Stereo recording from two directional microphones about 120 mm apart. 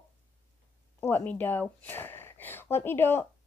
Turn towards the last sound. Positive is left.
turn(degrees=20)  # may be behind; listen again after turning